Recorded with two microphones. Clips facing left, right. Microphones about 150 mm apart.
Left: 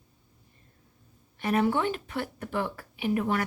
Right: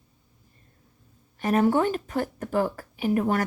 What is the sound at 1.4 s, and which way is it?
A woman's voice, 45° right (ahead or behind).